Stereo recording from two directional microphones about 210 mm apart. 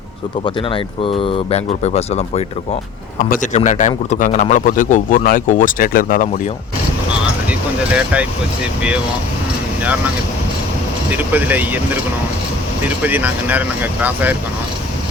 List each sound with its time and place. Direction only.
0.4 s speech: 25° left (ahead or behind); by 6.4 s 40° left (ahead or behind)
7.9 s speech: 5° right (ahead or behind)
9.8 s speech: 5° right (ahead or behind)
11.1 s speech: 10° right (ahead or behind)
13.0 s speech: 10° right (ahead or behind)